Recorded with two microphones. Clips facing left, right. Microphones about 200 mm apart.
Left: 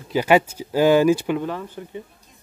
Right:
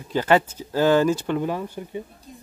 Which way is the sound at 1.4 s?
15° right (ahead or behind).